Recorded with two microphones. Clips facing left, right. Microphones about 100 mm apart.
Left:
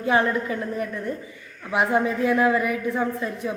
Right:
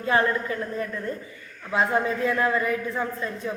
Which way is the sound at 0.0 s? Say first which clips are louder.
Left 1 dB; 15° left (ahead or behind).